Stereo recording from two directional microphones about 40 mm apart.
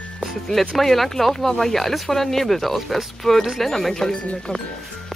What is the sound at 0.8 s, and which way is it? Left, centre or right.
Speech, centre.